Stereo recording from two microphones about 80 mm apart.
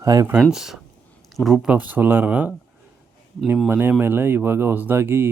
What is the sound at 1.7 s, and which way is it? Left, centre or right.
Speech, right.